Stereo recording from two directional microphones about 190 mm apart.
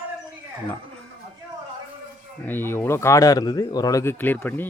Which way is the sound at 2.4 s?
10° left (ahead or behind).